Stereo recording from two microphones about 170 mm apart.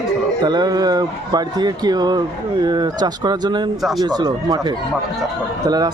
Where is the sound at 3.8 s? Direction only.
Centre (ahead or behind).